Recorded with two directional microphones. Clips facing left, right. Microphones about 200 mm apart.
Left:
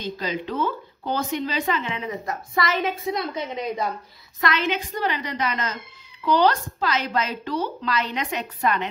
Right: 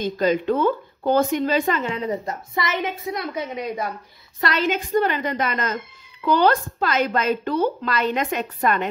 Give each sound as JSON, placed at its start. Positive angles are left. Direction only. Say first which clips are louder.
{"t": 0.0, "sound": "a woman's voice", "louder": "right 8 dB", "side_deg": -50}
{"t": 2.5, "sound": "a woman's voice", "louder": "left 1 dB", "side_deg": -20}
{"t": 3.2, "sound": "a woman's voice", "louder": "even", "side_deg": -10}
{"t": 4.4, "sound": "a woman's voice", "louder": "right 1 dB", "side_deg": -35}
{"t": 4.6, "sound": "a woman's voice", "louder": "right 5 dB", "side_deg": -50}